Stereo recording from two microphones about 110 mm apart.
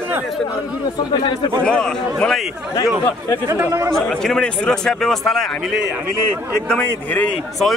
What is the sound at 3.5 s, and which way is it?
Speech, 25° right (ahead or behind).